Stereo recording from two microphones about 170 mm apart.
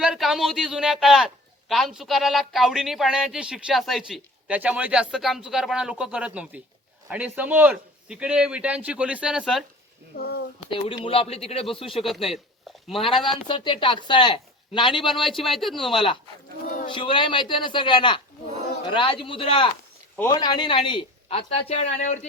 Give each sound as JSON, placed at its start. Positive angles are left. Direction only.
{"t": 0.0, "sound": "a man's voice", "side_deg": 0}
{"t": 10.2, "sound": "speech", "side_deg": 70}
{"t": 10.7, "sound": "speech", "side_deg": 30}
{"t": 11.9, "sound": "a man's voice", "side_deg": 0}
{"t": 13.5, "sound": "speech", "side_deg": 30}
{"t": 15.1, "sound": "a man's voice", "side_deg": 0}
{"t": 16.8, "sound": "speech", "side_deg": 30}